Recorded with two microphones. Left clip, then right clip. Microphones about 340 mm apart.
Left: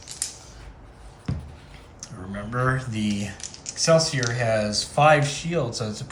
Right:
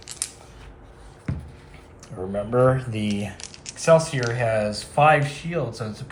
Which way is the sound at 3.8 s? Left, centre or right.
Centre.